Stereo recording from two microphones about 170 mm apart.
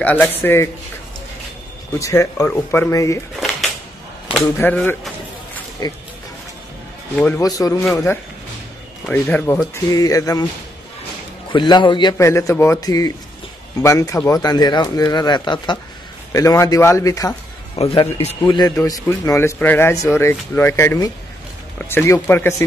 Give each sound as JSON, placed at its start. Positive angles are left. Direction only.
{"t": 0.0, "sound": "speech", "side_deg": 10}
{"t": 2.0, "sound": "speech", "side_deg": 20}
{"t": 4.4, "sound": "speech", "side_deg": 10}
{"t": 5.8, "sound": "speech", "side_deg": 20}
{"t": 7.2, "sound": "speech", "side_deg": 10}
{"t": 7.4, "sound": "speech", "side_deg": 20}
{"t": 11.5, "sound": "speech", "side_deg": 25}
{"t": 17.7, "sound": "speech", "side_deg": 35}
{"t": 18.4, "sound": "speech", "side_deg": 25}